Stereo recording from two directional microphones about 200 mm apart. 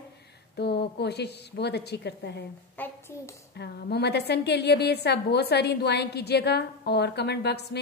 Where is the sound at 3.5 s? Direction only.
55° left (ahead or behind).